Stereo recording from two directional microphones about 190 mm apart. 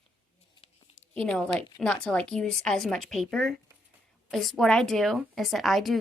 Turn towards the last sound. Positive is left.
turn(degrees=0)  # may be behind; listen again after turning